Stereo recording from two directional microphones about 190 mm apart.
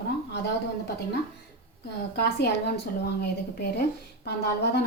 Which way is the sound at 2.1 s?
60° left (ahead or behind).